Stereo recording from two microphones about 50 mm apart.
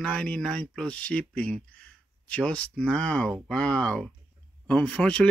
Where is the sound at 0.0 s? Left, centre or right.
Centre.